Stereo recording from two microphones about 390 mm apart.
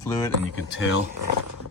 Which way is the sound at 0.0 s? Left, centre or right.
Centre.